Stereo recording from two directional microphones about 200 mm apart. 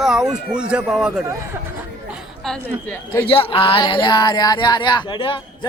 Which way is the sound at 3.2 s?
25° left (ahead or behind).